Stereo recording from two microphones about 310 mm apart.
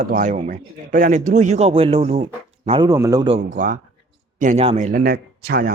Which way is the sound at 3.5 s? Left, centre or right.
Right.